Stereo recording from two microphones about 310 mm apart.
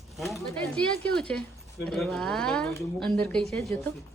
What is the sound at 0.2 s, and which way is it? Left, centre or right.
Speech, centre.